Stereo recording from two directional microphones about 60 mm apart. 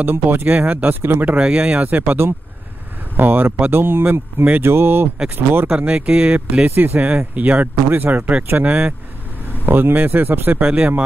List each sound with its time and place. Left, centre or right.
0.0 s speech: right
1.4 s speech: centre
3.2 s speech: right
5.7 s speech: centre
6.7 s speech: right
7.0 s speech: right
9.7 s speech: right
10.6 s speech: centre